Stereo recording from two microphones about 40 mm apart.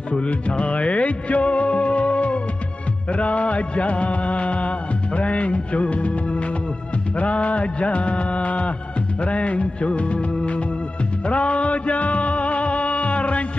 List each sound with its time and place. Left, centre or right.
0.2 s music: left